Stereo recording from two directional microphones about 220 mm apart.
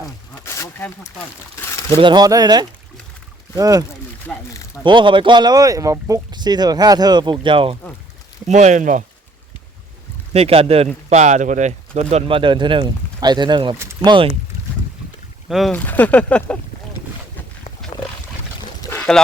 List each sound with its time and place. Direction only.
0.4 s a sound: 10° left (ahead or behind)
1.9 s speech: 20° right (ahead or behind)
4.3 s speech: 5° left (ahead or behind)
4.8 s speech: 20° right (ahead or behind)
10.3 s speech: 25° right (ahead or behind)
15.4 s speech: centre (ahead or behind)
18.8 s pour: 10° left (ahead or behind)